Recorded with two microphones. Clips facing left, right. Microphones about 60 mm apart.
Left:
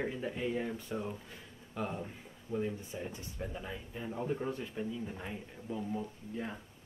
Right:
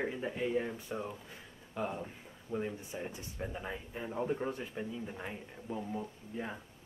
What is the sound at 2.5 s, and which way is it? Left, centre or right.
Speech, right.